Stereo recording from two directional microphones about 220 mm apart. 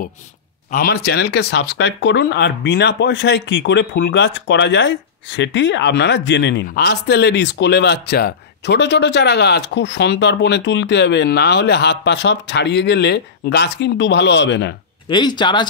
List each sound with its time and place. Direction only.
0.7 s speech: 40° left (ahead or behind)
15.0 s speech: 20° left (ahead or behind)